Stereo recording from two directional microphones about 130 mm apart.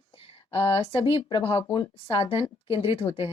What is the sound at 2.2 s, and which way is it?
Speech, 45° left (ahead or behind).